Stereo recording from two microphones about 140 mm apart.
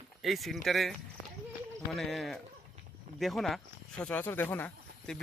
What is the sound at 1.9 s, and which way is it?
Speech, centre (ahead or behind).